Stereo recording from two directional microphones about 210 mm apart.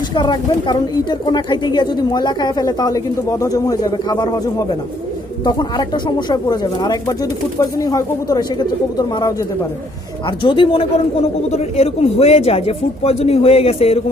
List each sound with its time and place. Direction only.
0.1 s speech: 20° left (ahead or behind)